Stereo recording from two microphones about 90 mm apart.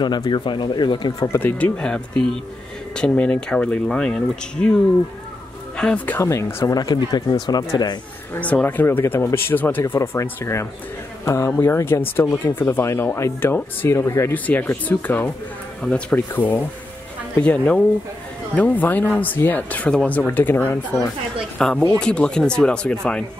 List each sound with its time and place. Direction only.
0.0 s speech: 55° left (ahead or behind)
1.4 s speech: 15° left (ahead or behind)
6.1 s speech: 30° left (ahead or behind); by 8.0 s 50° left (ahead or behind)
8.4 s speech: 15° left (ahead or behind)
10.4 s speech: 30° left (ahead or behind)
14.3 s speech: 20° left (ahead or behind)
21.5 s speech: 10° left (ahead or behind)